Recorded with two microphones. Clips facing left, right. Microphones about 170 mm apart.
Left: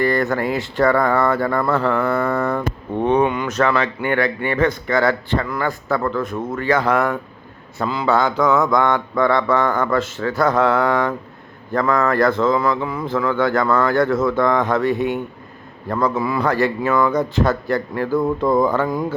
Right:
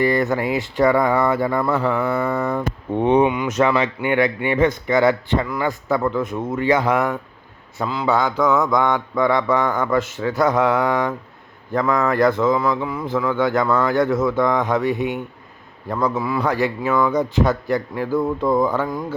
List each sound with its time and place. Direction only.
0.0 s speech: 20° right (ahead or behind)